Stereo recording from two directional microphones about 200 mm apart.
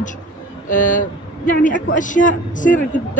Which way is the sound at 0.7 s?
40° left (ahead or behind).